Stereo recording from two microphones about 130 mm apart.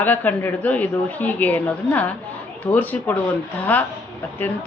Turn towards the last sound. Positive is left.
turn(degrees=15)  # may be behind; listen again after turning